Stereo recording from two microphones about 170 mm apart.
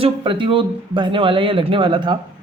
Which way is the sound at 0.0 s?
30° right (ahead or behind).